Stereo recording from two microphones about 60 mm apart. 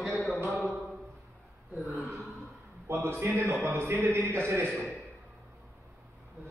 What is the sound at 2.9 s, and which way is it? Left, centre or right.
Speech, right.